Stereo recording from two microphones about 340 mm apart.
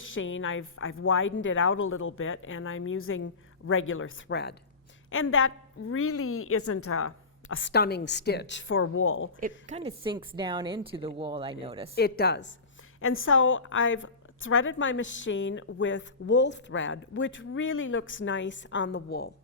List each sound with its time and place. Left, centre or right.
0.0 s a woman's voice: left
9.6 s a woman's voice: centre
11.9 s a woman's voice: left